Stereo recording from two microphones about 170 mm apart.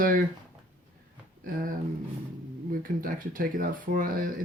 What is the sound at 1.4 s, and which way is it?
Speech, 55° right (ahead or behind).